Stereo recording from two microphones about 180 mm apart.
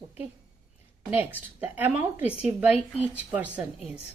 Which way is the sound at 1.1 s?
10° right (ahead or behind).